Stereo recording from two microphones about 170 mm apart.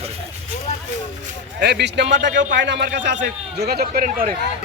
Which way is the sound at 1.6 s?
75° right (ahead or behind).